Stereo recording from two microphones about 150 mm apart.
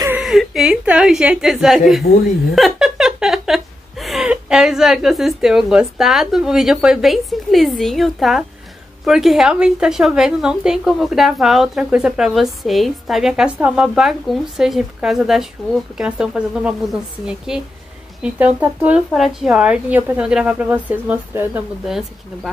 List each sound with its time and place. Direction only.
0.2 s a woman's voice: centre (ahead or behind)
2.1 s speech: 90° left
2.5 s a woman's voice: centre (ahead or behind)
21.8 s a woman's voice: centre (ahead or behind)